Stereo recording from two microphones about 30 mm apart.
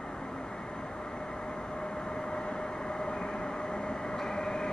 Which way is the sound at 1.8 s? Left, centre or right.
Left.